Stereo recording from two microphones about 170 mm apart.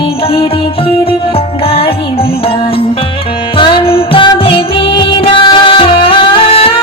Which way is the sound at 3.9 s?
30° left (ahead or behind).